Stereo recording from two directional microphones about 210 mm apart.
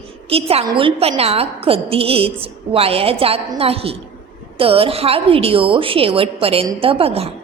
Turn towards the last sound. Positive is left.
turn(degrees=-30)  # may be behind; listen again after turning